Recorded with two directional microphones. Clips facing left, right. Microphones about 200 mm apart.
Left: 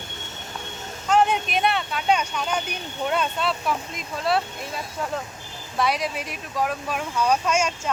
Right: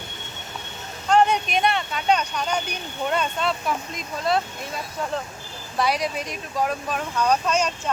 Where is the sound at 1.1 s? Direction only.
5° left (ahead or behind).